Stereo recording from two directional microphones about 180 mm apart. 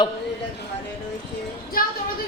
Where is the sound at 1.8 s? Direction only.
50° left (ahead or behind).